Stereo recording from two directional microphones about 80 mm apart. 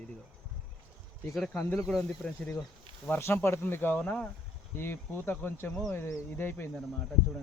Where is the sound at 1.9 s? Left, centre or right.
Centre.